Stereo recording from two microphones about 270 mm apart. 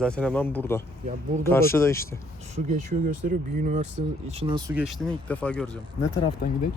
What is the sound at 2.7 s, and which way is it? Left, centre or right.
Speech, right.